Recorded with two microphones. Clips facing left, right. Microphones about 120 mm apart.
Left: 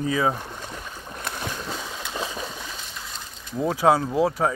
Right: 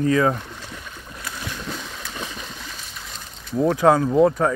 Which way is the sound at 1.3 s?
40° left (ahead or behind).